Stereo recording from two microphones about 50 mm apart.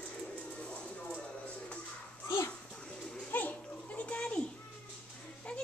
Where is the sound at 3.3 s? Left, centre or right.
Left.